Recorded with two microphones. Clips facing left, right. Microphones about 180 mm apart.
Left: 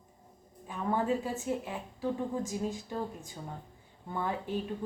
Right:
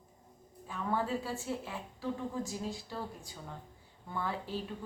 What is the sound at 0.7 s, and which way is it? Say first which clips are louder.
A woman's voice: left 4 dB; 15° left (ahead or behind).